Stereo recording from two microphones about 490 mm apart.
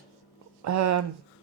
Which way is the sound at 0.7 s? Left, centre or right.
Right.